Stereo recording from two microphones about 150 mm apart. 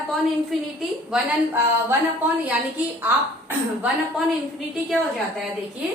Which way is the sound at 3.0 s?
15° right (ahead or behind).